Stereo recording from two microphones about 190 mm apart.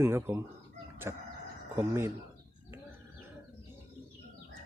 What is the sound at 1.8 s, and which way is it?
Speech, 15° right (ahead or behind).